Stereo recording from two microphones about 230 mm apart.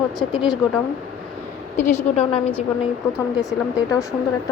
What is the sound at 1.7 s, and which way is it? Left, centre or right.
Speech, left.